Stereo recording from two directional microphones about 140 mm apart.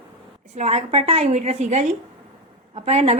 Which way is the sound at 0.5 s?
55° right (ahead or behind).